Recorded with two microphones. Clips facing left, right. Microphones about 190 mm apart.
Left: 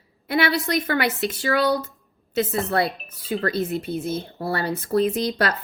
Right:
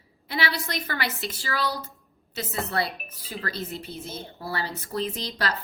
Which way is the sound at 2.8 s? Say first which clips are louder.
Left 7 dB; 20° left (ahead or behind).